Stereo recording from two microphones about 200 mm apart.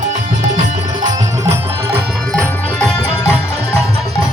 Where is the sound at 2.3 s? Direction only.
5° left (ahead or behind).